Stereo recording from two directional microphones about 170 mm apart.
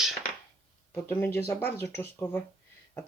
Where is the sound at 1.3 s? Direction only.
15° left (ahead or behind).